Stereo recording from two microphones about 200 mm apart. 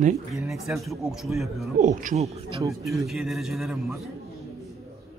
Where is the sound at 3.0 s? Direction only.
Centre (ahead or behind).